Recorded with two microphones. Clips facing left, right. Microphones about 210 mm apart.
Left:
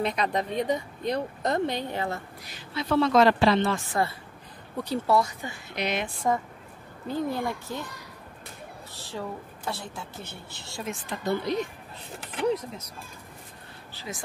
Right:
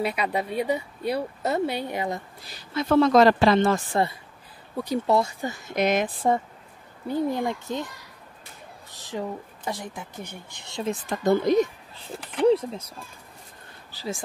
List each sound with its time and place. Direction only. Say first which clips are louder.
0.0 s speech: right 1 dB; 10° right (ahead or behind)
2.7 s speech: right 4 dB; 45° right (ahead or behind)
3.9 s a child's voice: right 3 dB; 20° right (ahead or behind)
5.4 s a woman's voice: right 7 dB; 45° right (ahead or behind)
7.1 s a child's voice: right 3 dB; 15° right (ahead or behind)
8.9 s a sound: right 5 dB; 15° right (ahead or behind)
9.7 s speech: right 2 dB; 15° right (ahead or behind)
10.9 s speech: right 7 dB; 45° right (ahead or behind)
12.4 s a child's voice: right 7 dB; 30° right (ahead or behind)
13.9 s a woman's voice: right 6 dB; 30° right (ahead or behind)